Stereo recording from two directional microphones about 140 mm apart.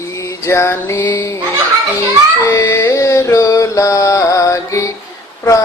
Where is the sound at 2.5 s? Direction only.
20° left (ahead or behind).